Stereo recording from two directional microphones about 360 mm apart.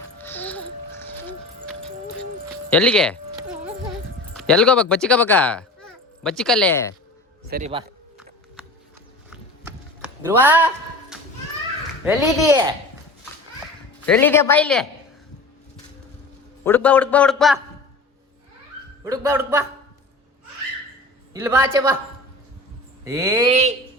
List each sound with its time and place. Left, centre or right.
0.2 s music: centre
2.6 s a man's voice: centre
4.4 s speech: centre
7.5 s speech: centre
9.3 s a sound: centre
11.1 s children playing: centre
12.0 s a man's voice: centre
14.0 s a man's voice: centre
16.6 s a man's voice: centre
19.0 s speech: centre
21.3 s speech: centre
23.0 s speech: centre